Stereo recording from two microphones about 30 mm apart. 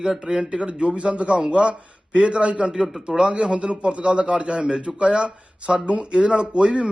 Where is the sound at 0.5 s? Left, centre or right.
Right.